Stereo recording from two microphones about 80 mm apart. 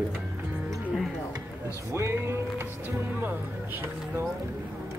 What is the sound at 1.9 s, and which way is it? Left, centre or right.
Speech, right.